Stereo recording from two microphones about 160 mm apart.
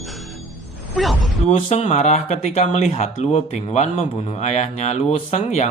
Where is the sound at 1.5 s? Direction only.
40° left (ahead or behind).